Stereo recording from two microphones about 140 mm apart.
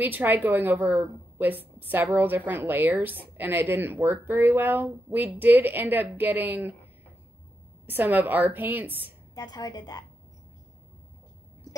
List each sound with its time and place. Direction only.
0.0 s a woman's voice: 15° right (ahead or behind)
7.8 s a woman's voice: 15° right (ahead or behind)
9.3 s a woman's voice: 30° left (ahead or behind)